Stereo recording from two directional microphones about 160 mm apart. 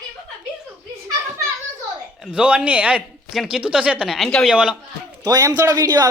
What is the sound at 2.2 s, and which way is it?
A man's voice, 5° right (ahead or behind).